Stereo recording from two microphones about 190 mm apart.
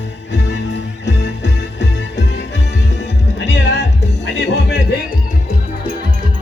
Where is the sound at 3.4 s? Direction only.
65° left (ahead or behind).